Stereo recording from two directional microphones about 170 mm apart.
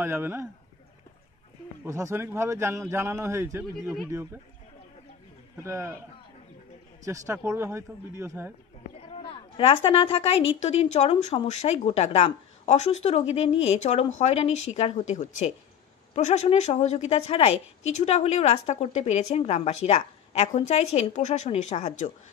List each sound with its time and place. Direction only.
0.0 s speech: 15° right (ahead or behind)
1.9 s speech: 20° right (ahead or behind)
5.6 s speech: 15° right (ahead or behind)
7.1 s speech: 15° right (ahead or behind)
9.1 s a woman's voice: 35° left (ahead or behind)